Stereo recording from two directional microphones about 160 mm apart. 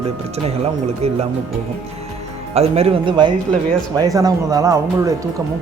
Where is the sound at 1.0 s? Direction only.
40° right (ahead or behind).